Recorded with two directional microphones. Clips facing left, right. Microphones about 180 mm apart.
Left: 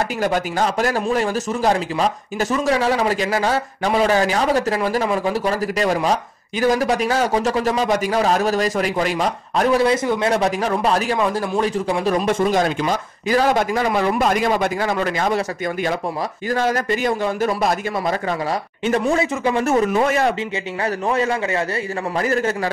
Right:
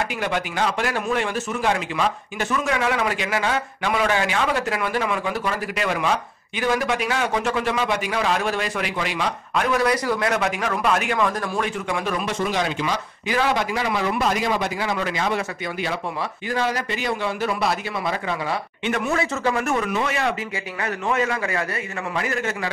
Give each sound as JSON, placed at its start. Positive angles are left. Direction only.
{"t": 0.2, "sound": "speech", "side_deg": 40}
{"t": 12.3, "sound": "speech", "side_deg": 50}
{"t": 18.9, "sound": "speech", "side_deg": 30}
{"t": 20.8, "sound": "speech", "side_deg": 30}